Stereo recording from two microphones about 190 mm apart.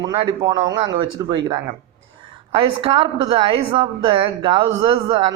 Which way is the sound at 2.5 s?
30° right (ahead or behind).